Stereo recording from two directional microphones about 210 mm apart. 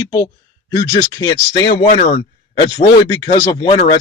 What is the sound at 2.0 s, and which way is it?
Speech, 25° left (ahead or behind).